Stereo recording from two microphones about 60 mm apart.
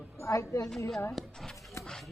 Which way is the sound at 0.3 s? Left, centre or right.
Left.